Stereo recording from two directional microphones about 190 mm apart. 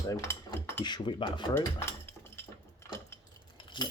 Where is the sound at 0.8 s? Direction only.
25° left (ahead or behind).